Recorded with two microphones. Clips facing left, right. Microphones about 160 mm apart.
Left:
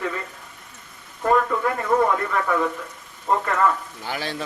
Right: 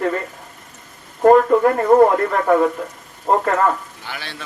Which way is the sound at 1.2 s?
50° right (ahead or behind).